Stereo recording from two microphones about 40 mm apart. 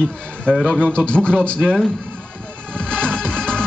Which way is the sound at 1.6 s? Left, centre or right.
Centre.